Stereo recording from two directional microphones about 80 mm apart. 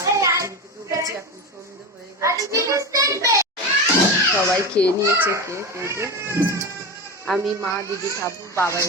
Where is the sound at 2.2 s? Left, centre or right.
Right.